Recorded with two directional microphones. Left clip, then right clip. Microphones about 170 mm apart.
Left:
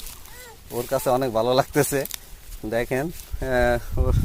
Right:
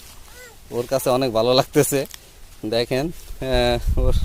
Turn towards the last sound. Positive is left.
turn(degrees=-35)  # may be behind; listen again after turning